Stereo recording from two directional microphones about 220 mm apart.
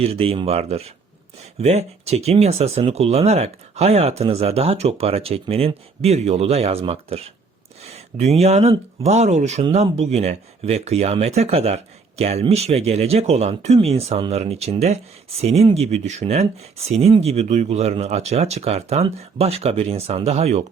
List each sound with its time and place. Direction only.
0.0 s speech: 25° right (ahead or behind)